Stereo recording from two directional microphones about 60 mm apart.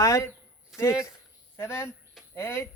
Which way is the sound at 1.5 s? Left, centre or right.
Left.